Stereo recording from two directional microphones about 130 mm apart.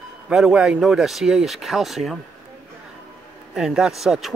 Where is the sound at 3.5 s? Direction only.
5° right (ahead or behind).